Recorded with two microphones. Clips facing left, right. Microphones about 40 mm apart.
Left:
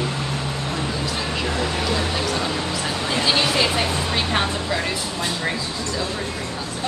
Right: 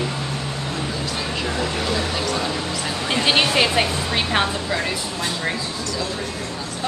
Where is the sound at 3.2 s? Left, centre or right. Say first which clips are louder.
Right 2 dB; right.